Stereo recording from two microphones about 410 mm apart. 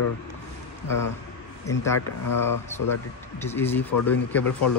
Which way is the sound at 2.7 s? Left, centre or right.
Centre.